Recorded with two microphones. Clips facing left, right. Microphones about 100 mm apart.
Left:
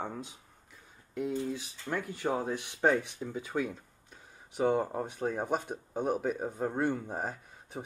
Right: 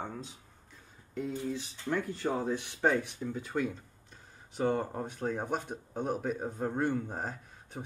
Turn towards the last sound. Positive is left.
turn(degrees=10)  # may be behind; listen again after turning